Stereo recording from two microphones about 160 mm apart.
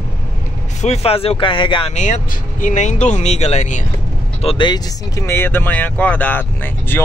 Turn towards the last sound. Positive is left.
turn(degrees=10)  # may be behind; listen again after turning